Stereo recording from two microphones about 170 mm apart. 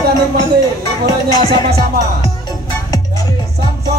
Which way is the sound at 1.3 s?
25° left (ahead or behind).